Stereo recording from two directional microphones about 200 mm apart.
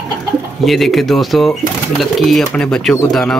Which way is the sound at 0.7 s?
Centre (ahead or behind).